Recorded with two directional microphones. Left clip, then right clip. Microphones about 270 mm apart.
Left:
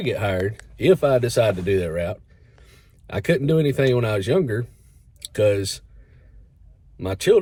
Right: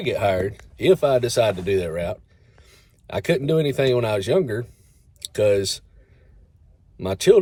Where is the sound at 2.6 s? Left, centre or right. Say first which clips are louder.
Right 1 dB; centre.